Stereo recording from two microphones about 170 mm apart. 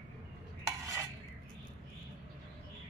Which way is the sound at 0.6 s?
15° right (ahead or behind).